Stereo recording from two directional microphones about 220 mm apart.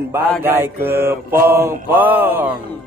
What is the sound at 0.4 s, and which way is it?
Music, 10° right (ahead or behind).